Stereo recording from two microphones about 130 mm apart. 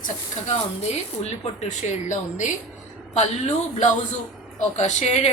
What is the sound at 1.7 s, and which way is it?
A woman's voice, 65° left (ahead or behind).